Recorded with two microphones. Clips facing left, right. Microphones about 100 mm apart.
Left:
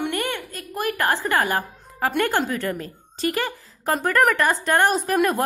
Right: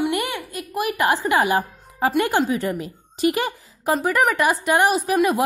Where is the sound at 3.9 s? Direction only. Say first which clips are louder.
Even; 5° right (ahead or behind).